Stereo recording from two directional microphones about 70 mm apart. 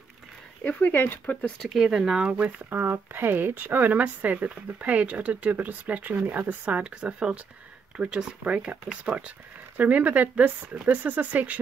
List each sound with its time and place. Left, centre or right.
0.7 s speech: left
1.2 s speech: centre
1.6 s speech: centre; by 2.8 s right
2.8 s speech: right